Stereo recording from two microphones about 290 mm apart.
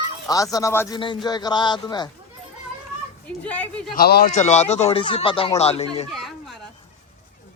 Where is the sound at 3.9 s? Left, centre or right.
Left.